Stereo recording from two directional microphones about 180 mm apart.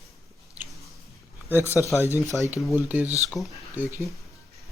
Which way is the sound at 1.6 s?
15° left (ahead or behind).